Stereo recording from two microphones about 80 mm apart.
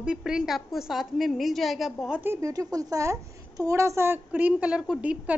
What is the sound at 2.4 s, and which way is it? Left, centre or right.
A woman's voice, right.